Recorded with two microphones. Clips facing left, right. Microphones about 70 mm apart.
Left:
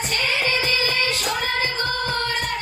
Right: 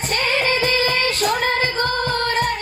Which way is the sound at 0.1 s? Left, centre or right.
Right.